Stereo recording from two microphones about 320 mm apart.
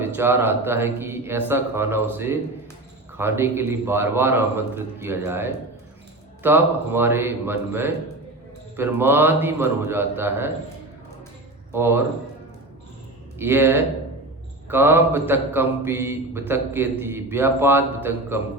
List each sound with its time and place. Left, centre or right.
0.0 s a man's voice: centre
11.7 s a man's voice: centre
13.4 s a man's voice: centre